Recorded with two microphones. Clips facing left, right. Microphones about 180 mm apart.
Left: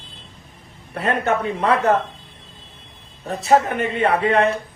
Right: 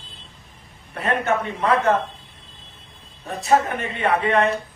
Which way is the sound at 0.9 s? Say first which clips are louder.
Left 1 dB; 30° left (ahead or behind).